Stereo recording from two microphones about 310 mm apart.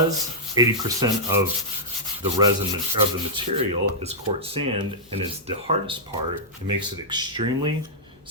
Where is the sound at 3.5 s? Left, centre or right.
Centre.